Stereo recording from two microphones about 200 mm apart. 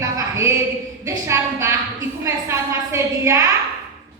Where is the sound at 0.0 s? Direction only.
15° right (ahead or behind).